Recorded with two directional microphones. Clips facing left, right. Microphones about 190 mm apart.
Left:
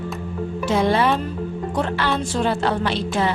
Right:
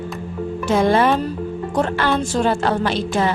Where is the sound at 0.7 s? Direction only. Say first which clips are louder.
Right 3 dB; 50° right (ahead or behind).